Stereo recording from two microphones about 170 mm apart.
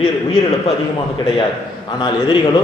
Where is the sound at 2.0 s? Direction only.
25° left (ahead or behind).